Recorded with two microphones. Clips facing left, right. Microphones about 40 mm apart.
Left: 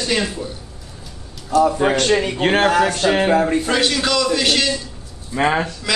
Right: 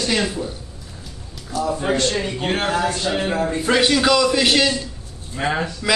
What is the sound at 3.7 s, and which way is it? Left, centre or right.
A man's voice, centre.